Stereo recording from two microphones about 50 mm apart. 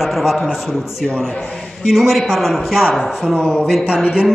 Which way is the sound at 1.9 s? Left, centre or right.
Centre.